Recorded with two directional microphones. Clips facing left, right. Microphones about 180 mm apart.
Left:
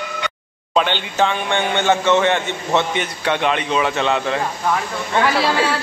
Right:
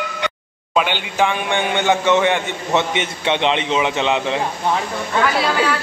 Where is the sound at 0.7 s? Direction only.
10° right (ahead or behind).